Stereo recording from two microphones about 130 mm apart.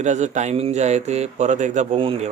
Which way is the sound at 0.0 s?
65° right (ahead or behind).